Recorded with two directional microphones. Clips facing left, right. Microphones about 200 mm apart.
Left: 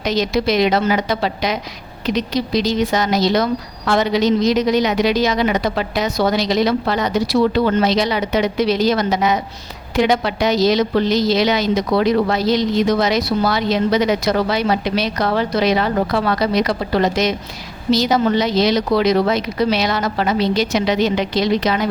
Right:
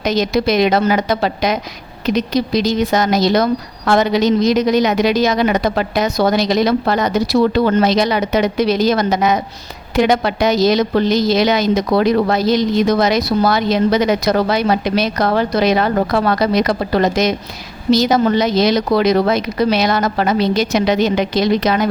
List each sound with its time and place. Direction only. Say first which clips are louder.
0.0 s a woman's voice: right 2 dB; 50° right (ahead or behind)